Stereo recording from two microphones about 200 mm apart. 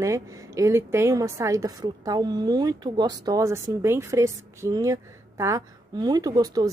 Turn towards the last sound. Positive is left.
turn(degrees=-20)  # may be behind; listen again after turning